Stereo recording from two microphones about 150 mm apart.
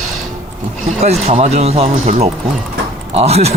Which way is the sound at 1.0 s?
50° right (ahead or behind).